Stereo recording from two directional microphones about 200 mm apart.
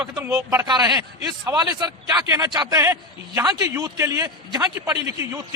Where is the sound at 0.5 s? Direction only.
15° right (ahead or behind).